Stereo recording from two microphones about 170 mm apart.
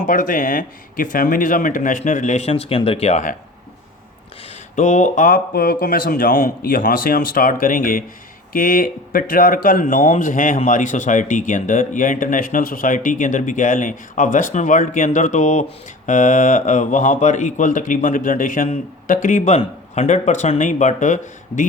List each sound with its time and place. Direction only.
0.0 s speech: 50° left (ahead or behind)
4.7 s speech: 45° left (ahead or behind)